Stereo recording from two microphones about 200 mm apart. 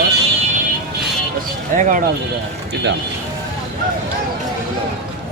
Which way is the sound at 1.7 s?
45° right (ahead or behind).